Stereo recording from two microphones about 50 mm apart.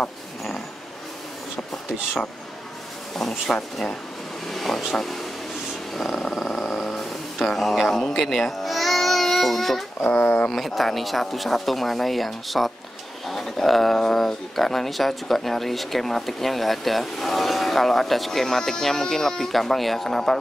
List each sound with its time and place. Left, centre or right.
3.2 s speech: centre
8.3 s babbling: centre
10.0 s speech: left
10.5 s speech: centre